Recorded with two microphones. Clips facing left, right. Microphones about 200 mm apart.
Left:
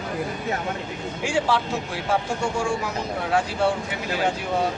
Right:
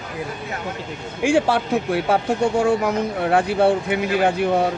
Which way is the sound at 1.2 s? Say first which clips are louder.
Right 6 dB; 55° right (ahead or behind).